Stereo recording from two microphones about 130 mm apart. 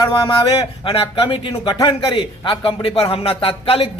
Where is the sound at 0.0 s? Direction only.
35° left (ahead or behind).